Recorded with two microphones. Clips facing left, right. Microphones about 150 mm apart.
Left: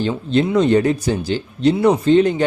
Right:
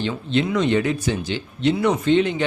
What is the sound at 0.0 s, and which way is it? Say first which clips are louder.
Speech: left 4 dB; 40° left (ahead or behind).